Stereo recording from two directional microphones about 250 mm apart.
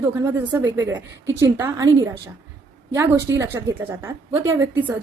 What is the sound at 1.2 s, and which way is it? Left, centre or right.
Speech, right.